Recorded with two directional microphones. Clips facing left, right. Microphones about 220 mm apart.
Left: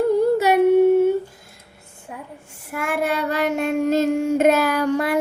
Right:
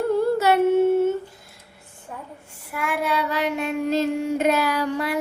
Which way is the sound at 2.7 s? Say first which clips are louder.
Left 2 dB; 45° left (ahead or behind).